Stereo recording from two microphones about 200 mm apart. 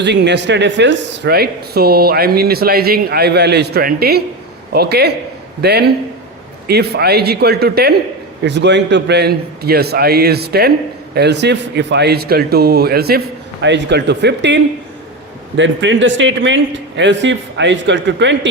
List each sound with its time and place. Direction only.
0.0 s a man's voice: 60° right (ahead or behind)